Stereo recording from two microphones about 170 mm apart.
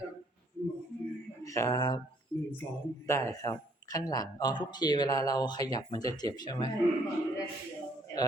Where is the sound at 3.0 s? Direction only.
15° left (ahead or behind).